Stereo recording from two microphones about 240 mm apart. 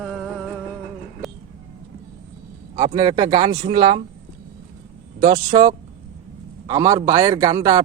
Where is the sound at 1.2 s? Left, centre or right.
Centre.